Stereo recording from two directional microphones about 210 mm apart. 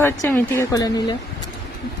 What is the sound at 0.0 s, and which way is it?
Speech, 10° left (ahead or behind).